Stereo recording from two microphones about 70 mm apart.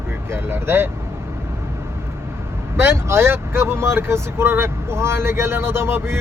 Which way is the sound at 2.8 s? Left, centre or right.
Right.